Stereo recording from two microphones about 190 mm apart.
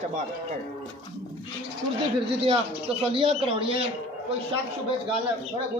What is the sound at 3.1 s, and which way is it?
Speech, 30° right (ahead or behind).